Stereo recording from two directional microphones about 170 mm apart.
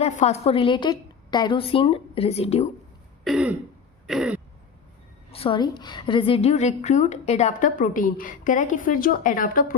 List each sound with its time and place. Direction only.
0.0 s a woman's voice: 40° left (ahead or behind)
3.2 s throat clearing: 5° right (ahead or behind)
5.3 s a woman's voice: 30° left (ahead or behind); by 9.7 s 55° left (ahead or behind)